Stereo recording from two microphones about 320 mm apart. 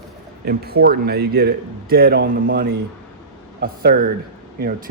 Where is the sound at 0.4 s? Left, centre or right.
Right.